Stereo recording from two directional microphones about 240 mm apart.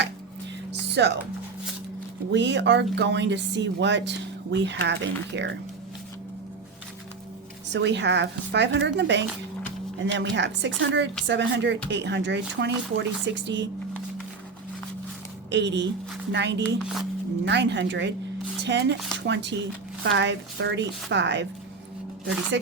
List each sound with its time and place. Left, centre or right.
0.7 s music: right
2.3 s speech: right
7.7 s speech: right
15.4 s speech: right
16.8 s speech: centre
17.4 s speech: right
22.5 s speech: right